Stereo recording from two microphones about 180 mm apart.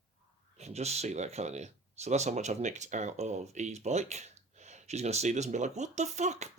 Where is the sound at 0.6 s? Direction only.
35° right (ahead or behind).